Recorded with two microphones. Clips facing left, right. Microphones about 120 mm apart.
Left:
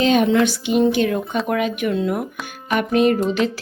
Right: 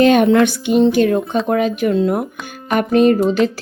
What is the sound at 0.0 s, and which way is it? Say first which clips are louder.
Music: right 5 dB; 55° right (ahead or behind).